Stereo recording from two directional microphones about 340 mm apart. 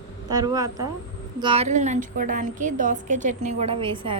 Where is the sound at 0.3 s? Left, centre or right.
Centre.